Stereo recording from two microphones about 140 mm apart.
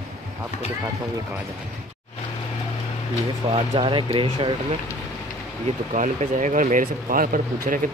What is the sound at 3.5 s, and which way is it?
Speech, 40° right (ahead or behind).